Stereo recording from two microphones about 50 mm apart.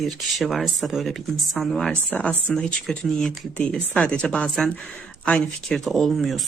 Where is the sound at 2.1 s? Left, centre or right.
Left.